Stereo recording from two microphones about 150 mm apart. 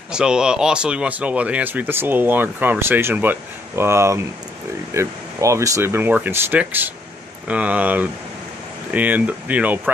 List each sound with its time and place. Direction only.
0.1 s speech: 5° right (ahead or behind)